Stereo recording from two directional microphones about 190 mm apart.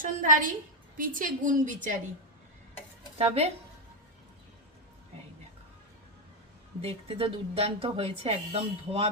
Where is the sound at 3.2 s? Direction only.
30° right (ahead or behind).